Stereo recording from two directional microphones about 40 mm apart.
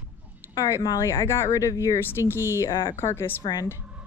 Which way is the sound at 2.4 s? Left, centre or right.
Left.